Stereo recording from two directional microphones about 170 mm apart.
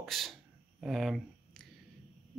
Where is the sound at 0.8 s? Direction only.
Centre (ahead or behind).